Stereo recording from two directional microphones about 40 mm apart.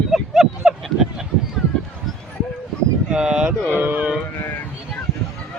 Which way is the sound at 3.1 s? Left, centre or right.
Right.